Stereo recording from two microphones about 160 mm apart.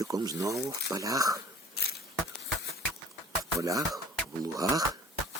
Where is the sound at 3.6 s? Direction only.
20° right (ahead or behind).